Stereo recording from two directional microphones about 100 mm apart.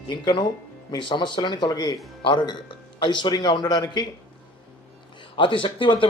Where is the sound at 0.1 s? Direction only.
50° left (ahead or behind).